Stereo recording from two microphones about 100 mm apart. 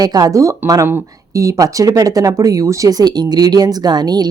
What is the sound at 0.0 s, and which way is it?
Speech, 40° right (ahead or behind).